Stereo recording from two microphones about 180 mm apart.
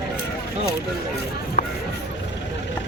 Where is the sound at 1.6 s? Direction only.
55° left (ahead or behind).